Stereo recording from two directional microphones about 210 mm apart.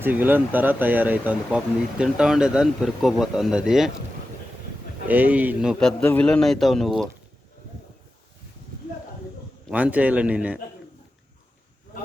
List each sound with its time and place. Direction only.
0.0 s speech: 10° right (ahead or behind)
5.0 s speech: 10° right (ahead or behind)
9.6 s speech: 5° right (ahead or behind)